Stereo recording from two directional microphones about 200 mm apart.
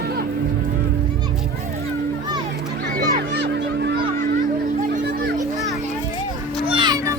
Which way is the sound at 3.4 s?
55° right (ahead or behind).